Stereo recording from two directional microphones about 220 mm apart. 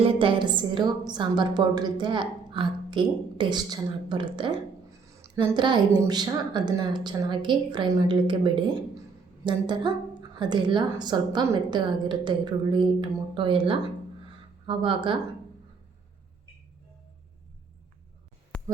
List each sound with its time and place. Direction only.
0.0 s a woman's voice: 25° right (ahead or behind)
9.5 s a woman's voice: 20° right (ahead or behind)
18.5 s a sound: 5° left (ahead or behind)